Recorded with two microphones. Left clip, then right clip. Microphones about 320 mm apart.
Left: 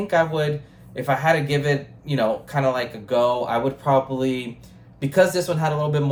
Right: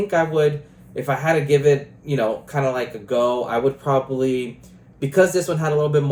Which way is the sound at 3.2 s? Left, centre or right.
Left.